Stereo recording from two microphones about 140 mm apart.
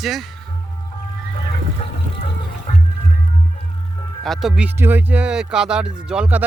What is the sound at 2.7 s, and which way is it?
Music, 60° left (ahead or behind).